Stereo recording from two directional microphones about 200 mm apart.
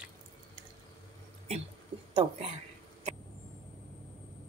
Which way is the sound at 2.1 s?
25° right (ahead or behind).